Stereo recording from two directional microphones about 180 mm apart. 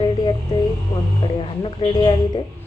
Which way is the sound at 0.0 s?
30° left (ahead or behind).